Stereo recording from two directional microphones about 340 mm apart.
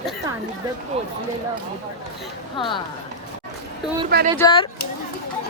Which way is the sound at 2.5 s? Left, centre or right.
Centre.